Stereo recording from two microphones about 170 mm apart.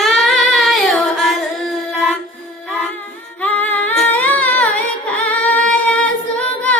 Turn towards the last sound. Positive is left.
turn(degrees=5)  # may be behind; listen again after turning